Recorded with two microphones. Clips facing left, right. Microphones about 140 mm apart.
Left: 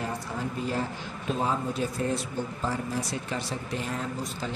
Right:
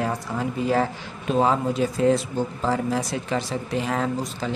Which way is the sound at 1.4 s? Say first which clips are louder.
Right 8 dB; 90° right.